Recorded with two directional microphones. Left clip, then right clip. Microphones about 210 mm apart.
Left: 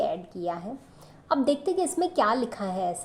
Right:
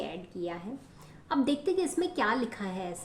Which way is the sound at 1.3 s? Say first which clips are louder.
Left 4 dB; 15° left (ahead or behind).